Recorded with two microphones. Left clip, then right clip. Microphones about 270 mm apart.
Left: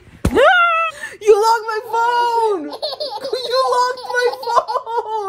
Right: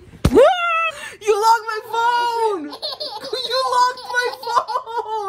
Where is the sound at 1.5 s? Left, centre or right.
Centre.